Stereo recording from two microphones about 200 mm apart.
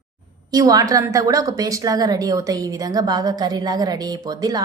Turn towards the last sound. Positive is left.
turn(degrees=-20)  # may be behind; listen again after turning